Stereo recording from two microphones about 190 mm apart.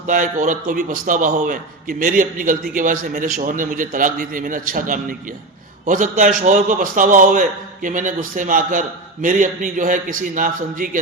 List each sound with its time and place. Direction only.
0.1 s a man's voice: 45° right (ahead or behind)